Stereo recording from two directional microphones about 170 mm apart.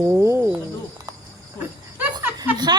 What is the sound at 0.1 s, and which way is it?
Cricket, 15° right (ahead or behind).